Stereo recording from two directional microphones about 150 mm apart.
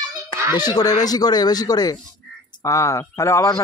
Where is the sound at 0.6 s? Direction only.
25° left (ahead or behind).